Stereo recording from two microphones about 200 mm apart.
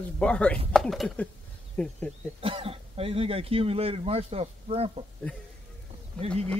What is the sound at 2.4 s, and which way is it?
Speech, 30° right (ahead or behind).